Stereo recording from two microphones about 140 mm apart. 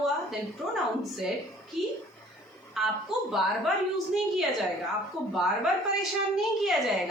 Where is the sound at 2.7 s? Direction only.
Centre (ahead or behind).